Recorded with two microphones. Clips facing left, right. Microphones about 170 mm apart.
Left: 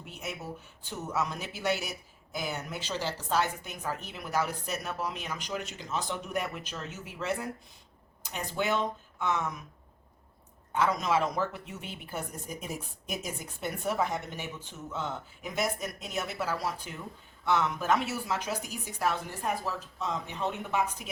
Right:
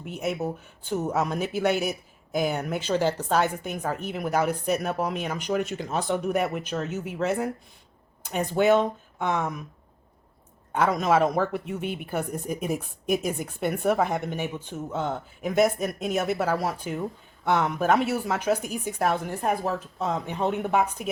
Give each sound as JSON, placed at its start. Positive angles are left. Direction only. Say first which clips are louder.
{"t": 0.0, "sound": "speech", "louder": "right 11 dB", "side_deg": -55}
{"t": 10.7, "sound": "speech", "louder": "right 5 dB", "side_deg": -55}